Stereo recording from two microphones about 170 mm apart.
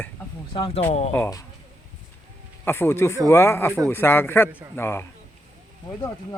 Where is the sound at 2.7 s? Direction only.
15° left (ahead or behind).